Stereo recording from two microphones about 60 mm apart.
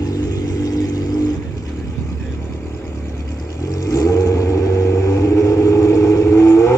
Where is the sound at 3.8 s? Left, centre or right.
Left.